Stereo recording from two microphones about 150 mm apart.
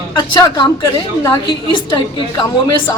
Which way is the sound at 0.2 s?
30° left (ahead or behind).